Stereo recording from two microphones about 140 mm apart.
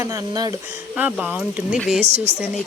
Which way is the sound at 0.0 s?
25° right (ahead or behind).